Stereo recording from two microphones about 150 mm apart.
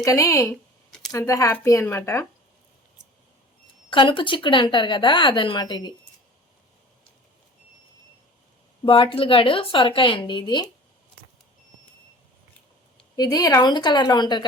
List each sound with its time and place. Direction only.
0.0 s speech: 20° left (ahead or behind)
0.5 s a sound: 5° left (ahead or behind)
1.1 s speech: 20° left (ahead or behind)
3.8 s speech: 35° left (ahead or behind)
8.8 s speech: 35° left (ahead or behind)
13.1 s speech: 25° left (ahead or behind)